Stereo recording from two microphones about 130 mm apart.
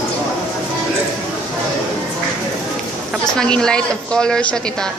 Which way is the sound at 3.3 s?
5° left (ahead or behind).